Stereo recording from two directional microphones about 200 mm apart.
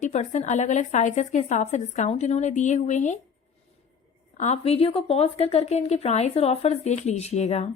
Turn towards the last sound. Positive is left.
turn(degrees=35)  # may be behind; listen again after turning